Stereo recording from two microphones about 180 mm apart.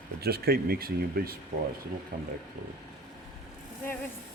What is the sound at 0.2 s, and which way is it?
Speech, 60° right (ahead or behind).